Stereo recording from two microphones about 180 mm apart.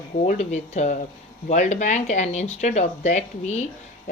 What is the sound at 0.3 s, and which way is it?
Speech, 40° left (ahead or behind).